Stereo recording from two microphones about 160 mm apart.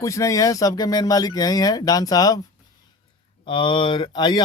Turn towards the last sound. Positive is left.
turn(degrees=30)  # may be behind; listen again after turning